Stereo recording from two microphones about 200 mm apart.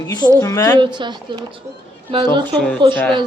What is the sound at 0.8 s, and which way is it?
A woman's voice, 25° right (ahead or behind).